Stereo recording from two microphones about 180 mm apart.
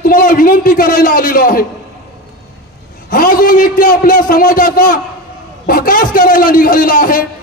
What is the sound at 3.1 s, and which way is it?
A man's voice, 50° left (ahead or behind).